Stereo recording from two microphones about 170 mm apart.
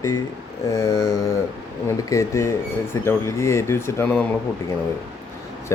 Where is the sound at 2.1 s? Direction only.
15° left (ahead or behind).